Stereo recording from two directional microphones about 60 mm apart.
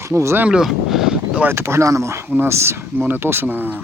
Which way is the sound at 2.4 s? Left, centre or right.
Right.